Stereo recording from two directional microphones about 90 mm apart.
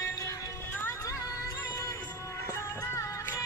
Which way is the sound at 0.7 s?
20° left (ahead or behind).